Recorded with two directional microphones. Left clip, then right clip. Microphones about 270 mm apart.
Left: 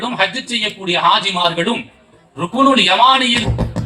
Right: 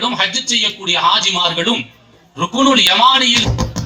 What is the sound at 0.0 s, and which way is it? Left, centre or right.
A man's voice, right.